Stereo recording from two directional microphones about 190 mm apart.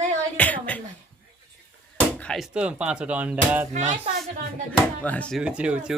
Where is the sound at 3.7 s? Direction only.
40° right (ahead or behind).